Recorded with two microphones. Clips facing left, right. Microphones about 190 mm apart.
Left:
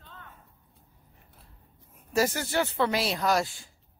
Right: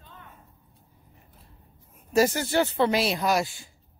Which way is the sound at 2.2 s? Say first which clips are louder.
Right 4 dB; 25° right (ahead or behind).